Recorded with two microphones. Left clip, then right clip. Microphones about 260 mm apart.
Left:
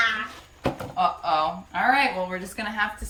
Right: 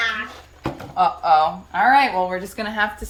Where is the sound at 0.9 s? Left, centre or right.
Centre.